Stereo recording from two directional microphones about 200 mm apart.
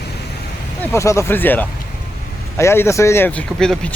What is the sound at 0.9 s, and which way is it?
Speech, 15° left (ahead or behind).